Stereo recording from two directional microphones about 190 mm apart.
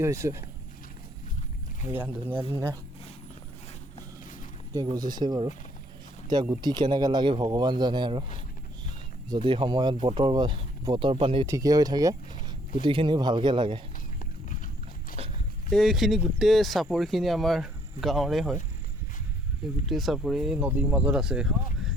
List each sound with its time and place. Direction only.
0.0 s speech: 15° right (ahead or behind)
1.9 s speech: 10° right (ahead or behind)
4.7 s speech: 20° right (ahead or behind)
9.3 s speech: 25° right (ahead or behind)
11.4 s speech: 15° right (ahead or behind)
14.2 s clip-clop: 45° left (ahead or behind)
15.7 s speech: centre (ahead or behind)
19.9 s speech: centre (ahead or behind)